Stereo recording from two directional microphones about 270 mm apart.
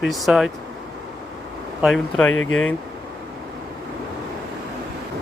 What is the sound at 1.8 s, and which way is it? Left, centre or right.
Speech, centre.